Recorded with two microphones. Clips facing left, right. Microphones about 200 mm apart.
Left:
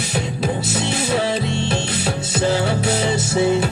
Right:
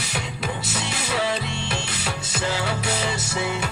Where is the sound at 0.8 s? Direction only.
30° left (ahead or behind).